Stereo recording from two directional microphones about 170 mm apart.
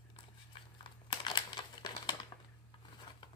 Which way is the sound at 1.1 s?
25° left (ahead or behind).